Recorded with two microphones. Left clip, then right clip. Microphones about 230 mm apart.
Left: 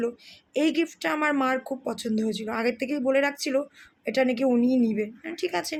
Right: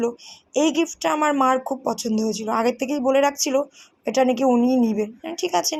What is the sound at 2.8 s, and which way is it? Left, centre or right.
Speech, left.